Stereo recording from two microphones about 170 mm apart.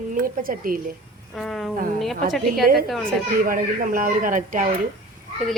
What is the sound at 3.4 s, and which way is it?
Speech, 55° right (ahead or behind).